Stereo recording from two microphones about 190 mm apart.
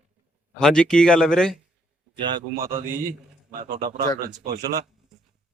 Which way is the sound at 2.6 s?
50° right (ahead or behind).